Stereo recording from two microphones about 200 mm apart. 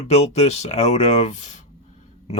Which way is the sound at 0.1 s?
35° left (ahead or behind).